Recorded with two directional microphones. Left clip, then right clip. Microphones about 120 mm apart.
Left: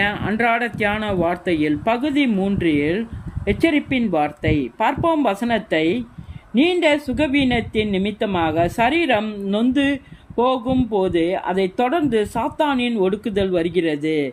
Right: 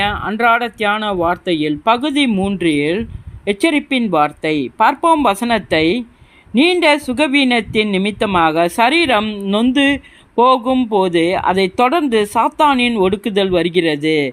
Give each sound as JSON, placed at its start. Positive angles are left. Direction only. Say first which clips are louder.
{"t": 0.0, "sound": "a man's voice", "louder": "right 4 dB", "side_deg": -20}